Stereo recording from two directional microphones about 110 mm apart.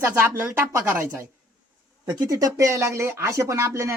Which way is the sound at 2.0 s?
35° right (ahead or behind).